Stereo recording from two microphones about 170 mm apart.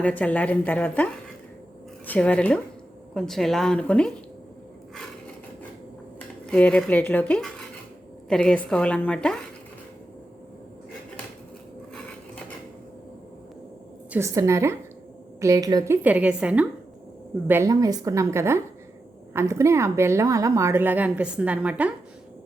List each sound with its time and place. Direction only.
0.0 s a woman's voice: 10° left (ahead or behind)
6.1 s a woman's voice: 5° left (ahead or behind)
14.1 s a woman's voice: 15° right (ahead or behind)